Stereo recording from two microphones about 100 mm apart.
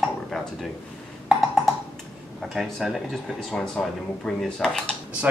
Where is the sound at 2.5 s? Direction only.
Centre (ahead or behind).